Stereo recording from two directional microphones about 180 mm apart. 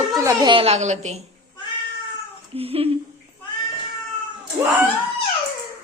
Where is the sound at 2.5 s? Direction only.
35° right (ahead or behind).